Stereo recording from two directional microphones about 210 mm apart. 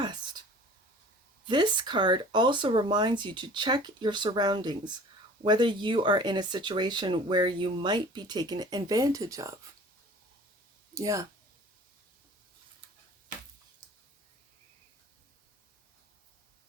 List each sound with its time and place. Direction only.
1.5 s speech: 20° right (ahead or behind)
10.9 s speech: 15° right (ahead or behind)